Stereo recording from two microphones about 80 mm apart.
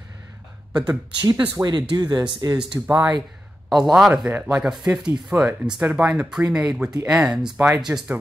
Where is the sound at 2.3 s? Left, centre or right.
Right.